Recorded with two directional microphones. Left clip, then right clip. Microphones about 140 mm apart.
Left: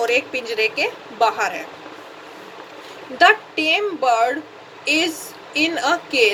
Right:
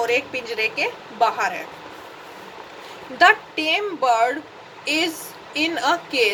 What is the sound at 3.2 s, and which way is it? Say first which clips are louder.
A woman's voice: left 1 dB; 20° right (ahead or behind).